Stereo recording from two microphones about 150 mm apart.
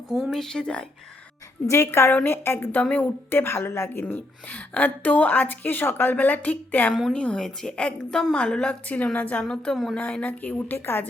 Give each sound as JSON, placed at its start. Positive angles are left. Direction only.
{"t": 0.1, "sound": "a woman's voice", "side_deg": 0}
{"t": 1.6, "sound": "a woman's voice", "side_deg": 20}